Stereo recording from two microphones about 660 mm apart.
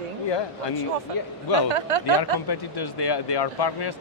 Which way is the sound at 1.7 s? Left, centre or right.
Right.